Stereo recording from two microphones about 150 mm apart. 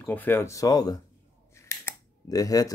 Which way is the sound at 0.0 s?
15° left (ahead or behind).